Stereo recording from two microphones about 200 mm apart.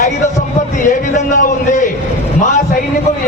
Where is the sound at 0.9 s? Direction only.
40° left (ahead or behind).